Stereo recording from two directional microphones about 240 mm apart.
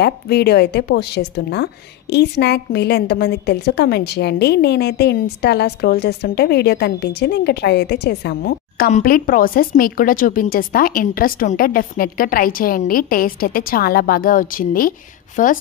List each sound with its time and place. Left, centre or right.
0.0 s a woman's voice: left